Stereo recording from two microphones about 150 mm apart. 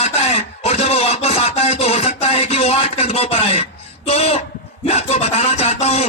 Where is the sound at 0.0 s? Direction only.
45° left (ahead or behind).